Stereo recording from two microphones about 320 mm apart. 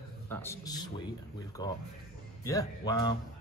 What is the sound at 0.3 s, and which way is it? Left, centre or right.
A man's voice, centre.